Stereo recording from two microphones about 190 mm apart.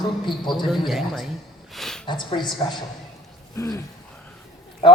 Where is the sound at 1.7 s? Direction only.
Centre (ahead or behind).